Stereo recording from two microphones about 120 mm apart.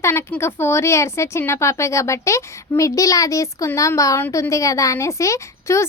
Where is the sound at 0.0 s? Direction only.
20° left (ahead or behind).